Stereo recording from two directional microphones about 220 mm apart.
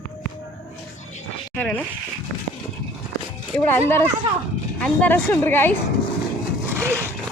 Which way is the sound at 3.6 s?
10° left (ahead or behind).